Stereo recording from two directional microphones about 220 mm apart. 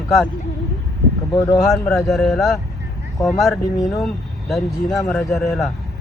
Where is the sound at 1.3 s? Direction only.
15° left (ahead or behind).